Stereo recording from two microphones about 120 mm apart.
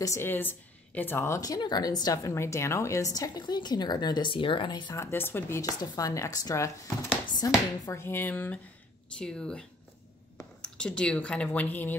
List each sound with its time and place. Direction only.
0.0 s a woman's voice: 20° left (ahead or behind)
2.3 s speech: 20° left (ahead or behind); by 4.9 s 40° left (ahead or behind)
4.9 s a woman's voice: 20° left (ahead or behind)
5.6 s a woman's voice: 30° left (ahead or behind)
9.2 s speech: 5° left (ahead or behind)